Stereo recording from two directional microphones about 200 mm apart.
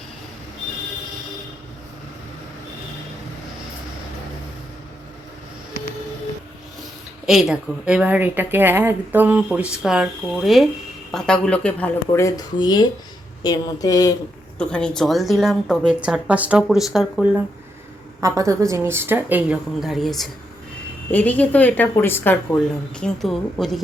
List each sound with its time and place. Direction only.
7.3 s a woman's voice: 5° right (ahead or behind); by 14.2 s 20° left (ahead or behind)
14.6 s a woman's voice: 5° left (ahead or behind)
18.2 s a woman's voice: 15° right (ahead or behind); by 23.8 s centre (ahead or behind)